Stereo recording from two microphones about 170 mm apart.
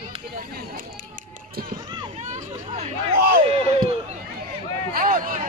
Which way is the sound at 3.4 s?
35° right (ahead or behind).